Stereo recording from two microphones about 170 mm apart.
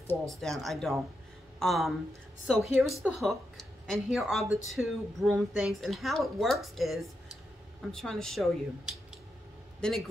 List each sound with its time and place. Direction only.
0.3 s a woman's voice: centre (ahead or behind)